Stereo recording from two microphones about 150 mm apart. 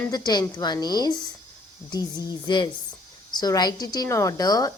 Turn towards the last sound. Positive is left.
turn(degrees=25)  # may be behind; listen again after turning